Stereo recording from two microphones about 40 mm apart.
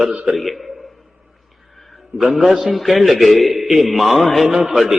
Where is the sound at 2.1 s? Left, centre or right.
Centre.